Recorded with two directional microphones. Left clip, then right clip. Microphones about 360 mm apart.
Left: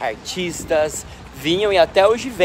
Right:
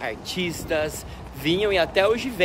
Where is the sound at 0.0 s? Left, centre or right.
Centre.